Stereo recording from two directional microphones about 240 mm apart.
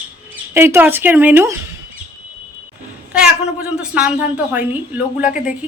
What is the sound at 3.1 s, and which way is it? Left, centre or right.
Speech, centre.